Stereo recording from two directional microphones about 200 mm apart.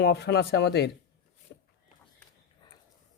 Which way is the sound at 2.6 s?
25° left (ahead or behind).